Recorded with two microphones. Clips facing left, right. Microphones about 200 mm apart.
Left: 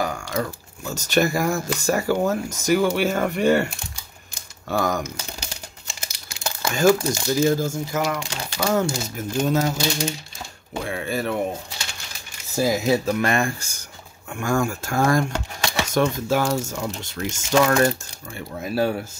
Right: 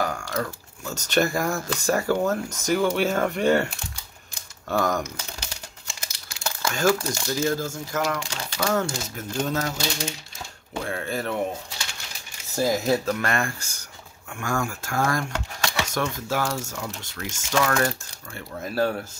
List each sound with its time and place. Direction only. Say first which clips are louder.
0.0 s speech: left 2 dB; 15° left (ahead or behind)
10.7 s speech: left 2 dB; 10° left (ahead or behind)
12.5 s speech: left 2 dB; 5° left (ahead or behind); by 17.9 s 25° left (ahead or behind)
18.3 s speech: left 3 dB; 10° left (ahead or behind)